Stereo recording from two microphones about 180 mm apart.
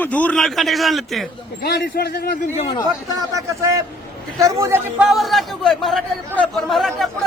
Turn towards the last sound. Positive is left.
turn(degrees=0)  # may be behind; listen again after turning